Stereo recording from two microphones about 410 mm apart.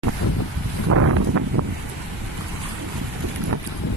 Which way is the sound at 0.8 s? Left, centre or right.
Right.